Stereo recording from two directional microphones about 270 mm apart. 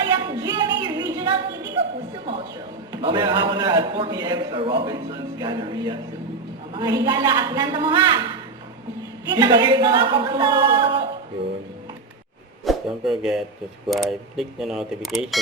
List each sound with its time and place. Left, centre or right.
0.0 s a sound: centre
2.9 s a man's voice: centre
9.3 s a man's voice: centre
12.6 s speech: centre